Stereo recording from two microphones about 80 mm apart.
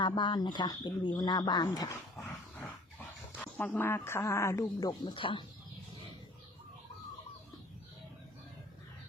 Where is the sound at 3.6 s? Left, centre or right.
Left.